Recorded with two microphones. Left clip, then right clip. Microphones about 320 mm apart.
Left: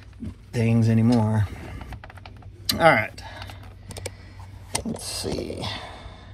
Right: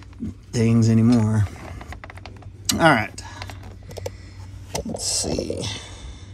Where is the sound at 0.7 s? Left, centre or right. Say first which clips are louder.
Right 3 dB; centre.